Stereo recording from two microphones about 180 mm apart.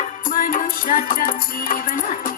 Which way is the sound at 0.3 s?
50° left (ahead or behind).